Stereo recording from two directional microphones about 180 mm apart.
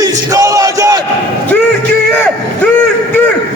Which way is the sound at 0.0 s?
20° right (ahead or behind).